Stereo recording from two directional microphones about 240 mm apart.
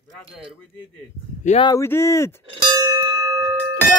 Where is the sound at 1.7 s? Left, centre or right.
Centre.